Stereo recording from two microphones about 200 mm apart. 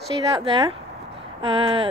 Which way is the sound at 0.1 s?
25° right (ahead or behind).